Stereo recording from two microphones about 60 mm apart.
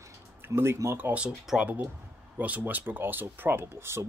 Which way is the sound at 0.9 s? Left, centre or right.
Right.